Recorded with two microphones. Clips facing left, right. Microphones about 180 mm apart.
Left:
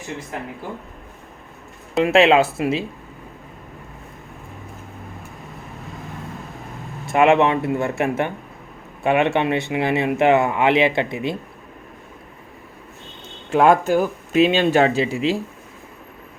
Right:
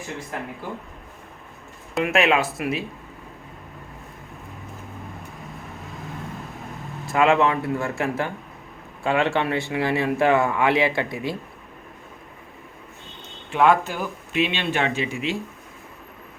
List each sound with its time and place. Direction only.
2.0 s speech: 30° left (ahead or behind)
7.1 s speech: 25° left (ahead or behind)
13.5 s speech: 45° left (ahead or behind)